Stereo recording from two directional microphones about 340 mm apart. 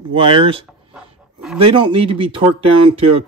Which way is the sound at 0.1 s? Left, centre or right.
Centre.